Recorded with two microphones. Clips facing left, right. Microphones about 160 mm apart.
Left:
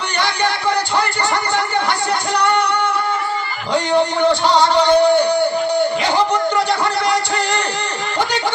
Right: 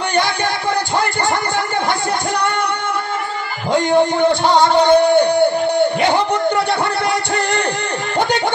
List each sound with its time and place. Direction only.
3.7 s a man's voice: 50° right (ahead or behind)